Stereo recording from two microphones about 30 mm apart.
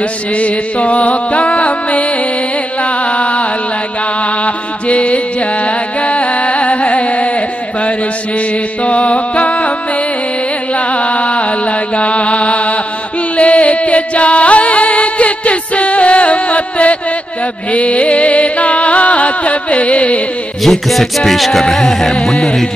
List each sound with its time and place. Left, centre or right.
0.4 s music: left
20.6 s music: centre